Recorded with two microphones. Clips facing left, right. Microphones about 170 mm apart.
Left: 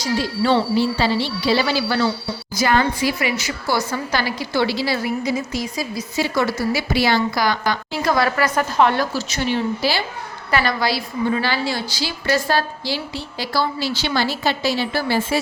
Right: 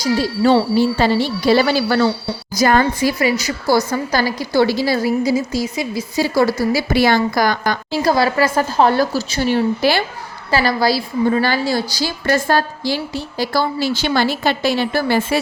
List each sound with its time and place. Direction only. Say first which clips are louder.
0.2 s a woman's voice: right 4 dB; 45° right (ahead or behind); by 6.1 s 25° right (ahead or behind)
6.1 s a woman's voice: right 5 dB; 35° right (ahead or behind)
6.9 s a woman's voice: right 4 dB; 50° right (ahead or behind)
8.0 s a woman's voice: right 3 dB; 30° right (ahead or behind)
9.8 s a woman's voice: right 6 dB; 55° right (ahead or behind)
10.5 s a woman's voice: right 4 dB; 35° right (ahead or behind); by 15.4 s 55° right (ahead or behind)